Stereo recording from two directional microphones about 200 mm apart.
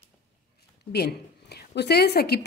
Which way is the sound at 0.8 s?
55° left (ahead or behind).